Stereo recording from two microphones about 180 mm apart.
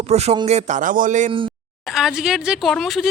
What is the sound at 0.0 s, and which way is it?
A man's voice, 35° right (ahead or behind).